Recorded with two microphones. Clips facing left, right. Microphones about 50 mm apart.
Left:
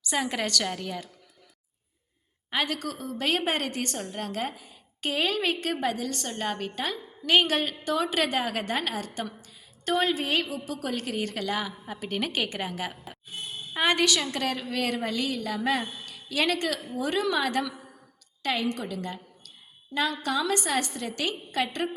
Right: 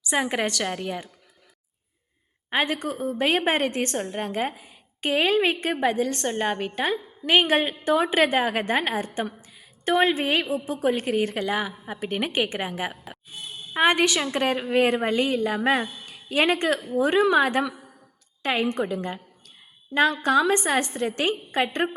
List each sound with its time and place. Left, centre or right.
0.0 s a woman's voice: centre
2.5 s a woman's voice: right